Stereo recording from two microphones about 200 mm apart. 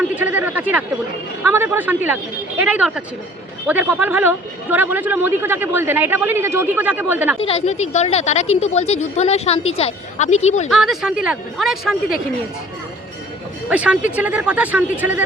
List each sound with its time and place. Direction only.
0.0 s speech: 10° right (ahead or behind)
7.4 s a woman's voice: 30° left (ahead or behind)
10.7 s speech: centre (ahead or behind)
13.7 s speech: 5° right (ahead or behind)